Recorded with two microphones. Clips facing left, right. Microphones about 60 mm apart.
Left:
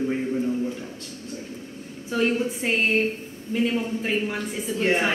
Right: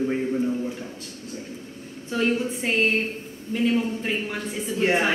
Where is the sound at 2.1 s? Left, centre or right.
Centre.